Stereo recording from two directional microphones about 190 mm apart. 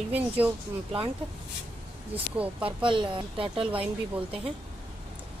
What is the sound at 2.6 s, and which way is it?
Speech, 25° right (ahead or behind).